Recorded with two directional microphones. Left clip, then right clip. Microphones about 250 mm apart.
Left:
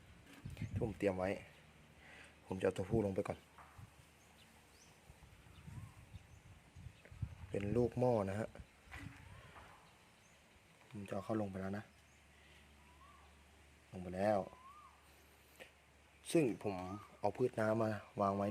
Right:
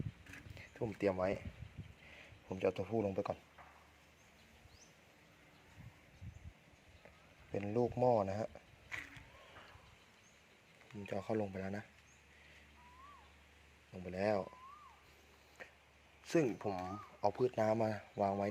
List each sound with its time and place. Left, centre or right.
0.6 s speech: centre
7.5 s speech: centre
11.0 s speech: centre
14.1 s speech: centre
16.2 s speech: centre